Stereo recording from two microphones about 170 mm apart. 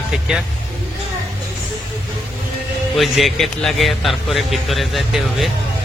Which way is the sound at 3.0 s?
Centre (ahead or behind).